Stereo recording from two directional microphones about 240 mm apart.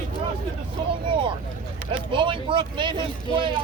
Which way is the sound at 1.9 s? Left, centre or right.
Right.